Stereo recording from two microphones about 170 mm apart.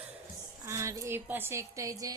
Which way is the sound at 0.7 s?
15° right (ahead or behind).